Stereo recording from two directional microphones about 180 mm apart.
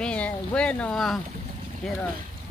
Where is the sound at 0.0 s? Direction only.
5° left (ahead or behind).